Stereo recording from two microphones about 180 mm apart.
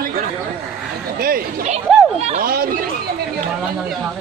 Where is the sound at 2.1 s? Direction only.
35° right (ahead or behind).